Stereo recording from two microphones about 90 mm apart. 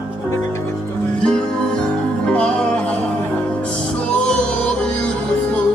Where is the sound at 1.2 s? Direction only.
10° left (ahead or behind).